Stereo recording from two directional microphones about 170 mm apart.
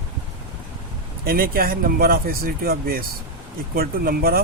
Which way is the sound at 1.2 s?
60° right (ahead or behind).